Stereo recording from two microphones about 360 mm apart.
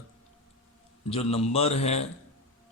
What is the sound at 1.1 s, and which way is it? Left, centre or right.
Speech, centre.